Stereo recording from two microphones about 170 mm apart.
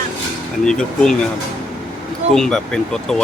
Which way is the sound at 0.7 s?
5° left (ahead or behind).